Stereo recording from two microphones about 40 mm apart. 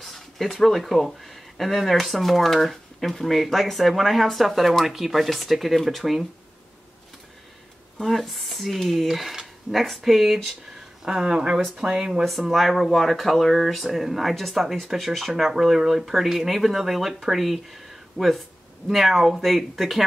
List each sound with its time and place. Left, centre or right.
0.0 s speech: centre
8.0 s speech: centre
11.1 s speech: centre
12.3 s speech: centre